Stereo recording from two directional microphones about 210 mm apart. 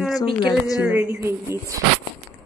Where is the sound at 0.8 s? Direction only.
10° right (ahead or behind).